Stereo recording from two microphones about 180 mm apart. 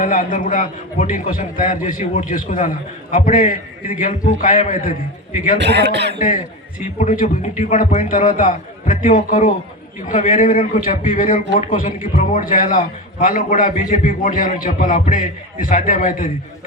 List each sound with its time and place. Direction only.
0.0 s a man's voice: 45° left (ahead or behind)
5.5 s a man's voice: 70° right (ahead or behind)
6.1 s a man's voice: 45° left (ahead or behind)